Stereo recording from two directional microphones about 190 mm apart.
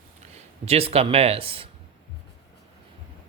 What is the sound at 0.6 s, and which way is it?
Speech, 30° right (ahead or behind).